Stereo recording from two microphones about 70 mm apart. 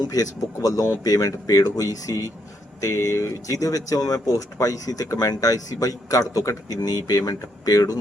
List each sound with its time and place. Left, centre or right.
0.0 s speech: left